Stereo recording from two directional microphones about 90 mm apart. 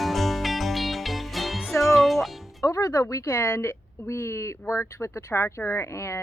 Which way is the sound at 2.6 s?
35° left (ahead or behind).